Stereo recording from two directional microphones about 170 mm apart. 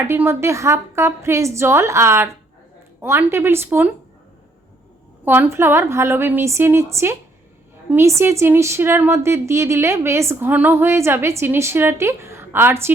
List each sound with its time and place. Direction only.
0.1 s a woman's voice: 15° right (ahead or behind)
5.2 s a woman's voice: 10° right (ahead or behind)